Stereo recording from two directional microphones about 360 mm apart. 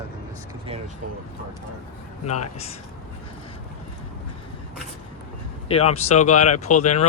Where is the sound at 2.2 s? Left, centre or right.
Left.